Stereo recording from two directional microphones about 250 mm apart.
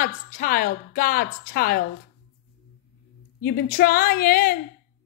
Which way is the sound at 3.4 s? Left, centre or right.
Left.